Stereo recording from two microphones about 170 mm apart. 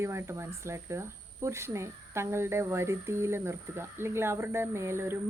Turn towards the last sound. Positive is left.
turn(degrees=-15)  # may be behind; listen again after turning